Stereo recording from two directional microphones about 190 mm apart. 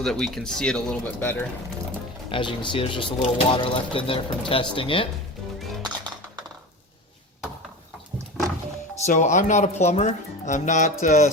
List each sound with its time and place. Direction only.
0.0 s speech: centre (ahead or behind)
2.3 s speech: 25° left (ahead or behind)
8.4 s music: centre (ahead or behind)
9.0 s speech: 40° left (ahead or behind)